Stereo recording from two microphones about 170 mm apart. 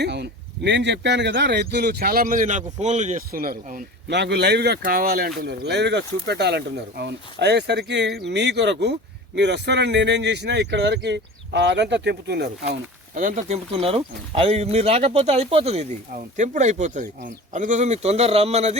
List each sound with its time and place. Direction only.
0.0 s speech: 85° right; by 3.8 s 55° right (ahead or behind)
4.1 s a man's voice: 85° right
13.1 s speech: 50° right (ahead or behind)